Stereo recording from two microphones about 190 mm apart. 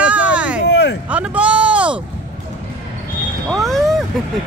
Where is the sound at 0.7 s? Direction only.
65° left (ahead or behind).